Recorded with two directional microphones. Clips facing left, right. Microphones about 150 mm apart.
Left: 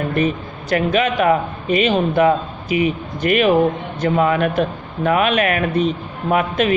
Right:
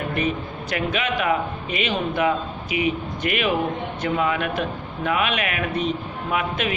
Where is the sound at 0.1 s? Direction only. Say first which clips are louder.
Left 5 dB; 40° left (ahead or behind).